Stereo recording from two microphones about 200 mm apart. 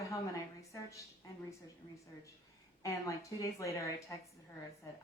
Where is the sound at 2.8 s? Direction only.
15° left (ahead or behind).